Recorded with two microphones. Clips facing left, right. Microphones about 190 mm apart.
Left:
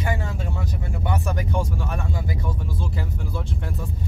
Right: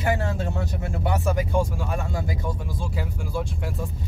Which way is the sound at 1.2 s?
15° right (ahead or behind).